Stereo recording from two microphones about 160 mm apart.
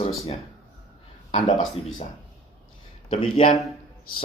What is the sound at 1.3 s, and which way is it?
Speech, 50° left (ahead or behind).